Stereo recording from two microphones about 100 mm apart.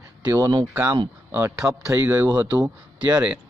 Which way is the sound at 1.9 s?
25° right (ahead or behind).